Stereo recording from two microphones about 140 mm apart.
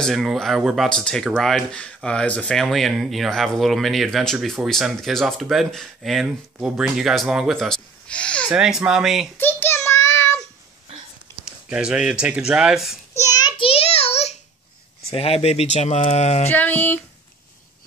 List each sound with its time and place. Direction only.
0.0 s speech: centre (ahead or behind)
8.5 s speech: 5° right (ahead or behind)
9.4 s child singing: 15° left (ahead or behind)
11.4 s speech: 5° right (ahead or behind)
13.2 s child singing: 30° left (ahead or behind); by 14.4 s 50° left (ahead or behind)
15.0 s speech: 45° left (ahead or behind)
16.4 s a sound: 15° left (ahead or behind)